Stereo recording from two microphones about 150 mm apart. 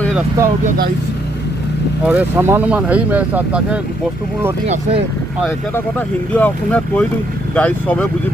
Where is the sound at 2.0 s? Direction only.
10° right (ahead or behind).